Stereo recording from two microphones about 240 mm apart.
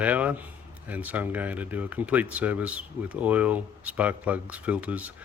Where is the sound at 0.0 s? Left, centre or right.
Centre.